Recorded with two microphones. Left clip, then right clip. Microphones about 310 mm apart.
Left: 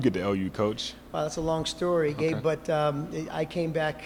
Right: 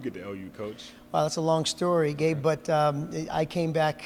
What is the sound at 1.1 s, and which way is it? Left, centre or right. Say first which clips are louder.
Speech: right 4 dB; right.